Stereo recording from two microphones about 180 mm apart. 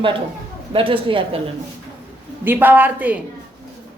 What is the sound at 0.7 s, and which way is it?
Speech, 30° right (ahead or behind).